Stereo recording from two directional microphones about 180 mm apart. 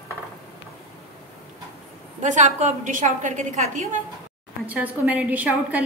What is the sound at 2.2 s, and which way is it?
A woman's voice, 45° right (ahead or behind).